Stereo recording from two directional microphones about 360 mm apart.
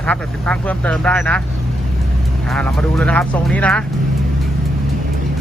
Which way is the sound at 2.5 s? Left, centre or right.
Centre.